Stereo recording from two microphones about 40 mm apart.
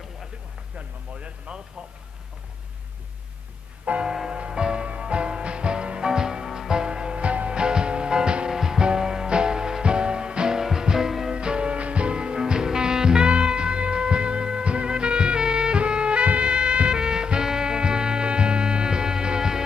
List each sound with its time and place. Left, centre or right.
0.7 s a sound: right
4.0 s music: centre
11.3 s music: right